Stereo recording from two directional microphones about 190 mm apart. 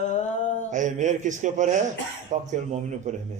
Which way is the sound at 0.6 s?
40° right (ahead or behind).